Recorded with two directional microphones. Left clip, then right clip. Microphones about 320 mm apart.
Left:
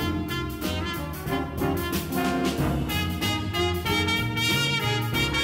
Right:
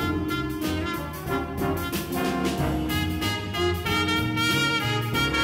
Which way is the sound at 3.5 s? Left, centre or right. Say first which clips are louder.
Right 1 dB; left.